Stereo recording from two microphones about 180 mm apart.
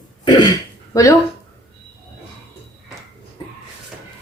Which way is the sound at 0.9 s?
20° left (ahead or behind).